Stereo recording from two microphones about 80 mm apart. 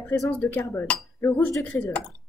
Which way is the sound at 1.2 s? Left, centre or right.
Left.